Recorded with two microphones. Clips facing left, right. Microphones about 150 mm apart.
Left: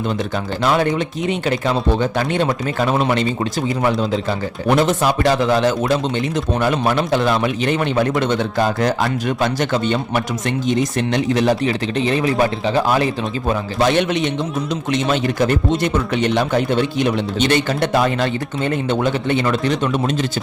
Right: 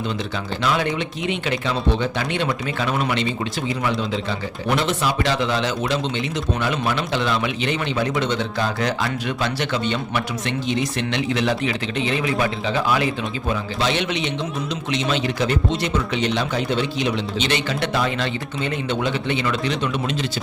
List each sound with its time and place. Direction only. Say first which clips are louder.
0.6 s a man's voice: left 5 dB; 45° left (ahead or behind)
13.5 s a man's voice: left 6 dB; 50° left (ahead or behind)